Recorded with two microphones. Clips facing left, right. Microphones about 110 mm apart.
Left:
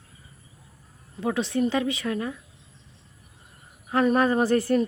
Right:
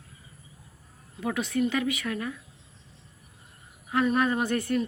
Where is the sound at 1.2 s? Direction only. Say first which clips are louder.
Left 3 dB; 30° left (ahead or behind).